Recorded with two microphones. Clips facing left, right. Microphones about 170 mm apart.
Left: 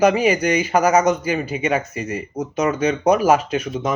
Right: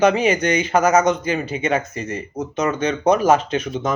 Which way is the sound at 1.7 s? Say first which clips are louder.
Even; 25° right (ahead or behind).